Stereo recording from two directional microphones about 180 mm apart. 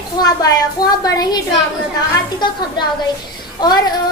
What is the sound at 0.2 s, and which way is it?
Child singing, 20° left (ahead or behind).